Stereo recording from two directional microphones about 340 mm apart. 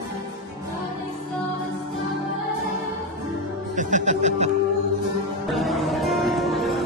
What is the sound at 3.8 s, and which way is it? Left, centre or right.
Music, right.